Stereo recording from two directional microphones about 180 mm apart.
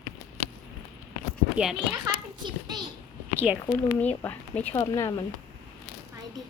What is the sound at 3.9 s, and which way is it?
Speech, 10° left (ahead or behind).